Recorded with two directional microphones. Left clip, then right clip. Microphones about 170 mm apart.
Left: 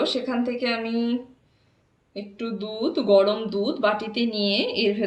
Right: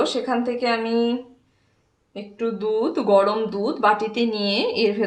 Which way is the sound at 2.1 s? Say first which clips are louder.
Right 5 dB; 30° right (ahead or behind).